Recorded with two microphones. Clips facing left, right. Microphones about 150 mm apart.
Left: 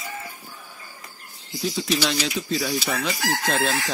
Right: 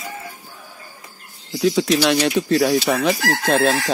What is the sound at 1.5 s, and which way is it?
Chicken, 85° right.